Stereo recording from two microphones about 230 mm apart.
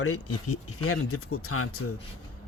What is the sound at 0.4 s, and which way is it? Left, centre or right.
Speech, left.